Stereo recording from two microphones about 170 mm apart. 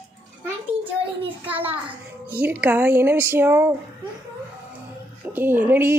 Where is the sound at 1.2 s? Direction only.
35° right (ahead or behind).